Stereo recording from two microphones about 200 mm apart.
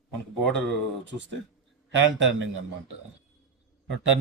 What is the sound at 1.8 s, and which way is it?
Speech, 65° right (ahead or behind).